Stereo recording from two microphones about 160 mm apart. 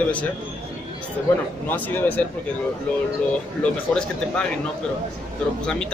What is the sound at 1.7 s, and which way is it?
Speech, 10° left (ahead or behind).